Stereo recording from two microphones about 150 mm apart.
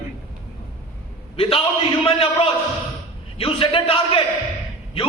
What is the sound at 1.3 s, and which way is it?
A man's voice, 35° left (ahead or behind).